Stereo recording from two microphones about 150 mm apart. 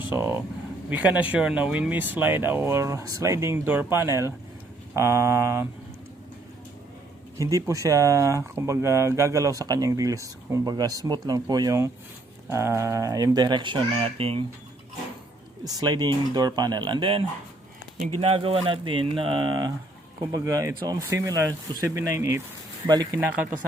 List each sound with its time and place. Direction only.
0.1 s speech: 15° right (ahead or behind)
7.3 s speech: 20° right (ahead or behind); by 14.4 s 40° right (ahead or behind)
15.6 s speech: 25° right (ahead or behind)